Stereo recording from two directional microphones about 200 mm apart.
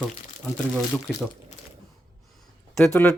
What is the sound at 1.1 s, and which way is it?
Speech, 5° left (ahead or behind).